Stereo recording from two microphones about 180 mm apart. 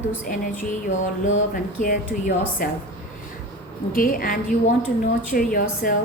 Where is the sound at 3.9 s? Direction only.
50° left (ahead or behind).